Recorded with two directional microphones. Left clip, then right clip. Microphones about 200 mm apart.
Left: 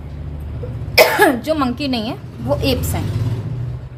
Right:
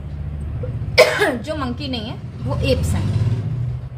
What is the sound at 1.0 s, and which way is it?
Speech, 50° left (ahead or behind).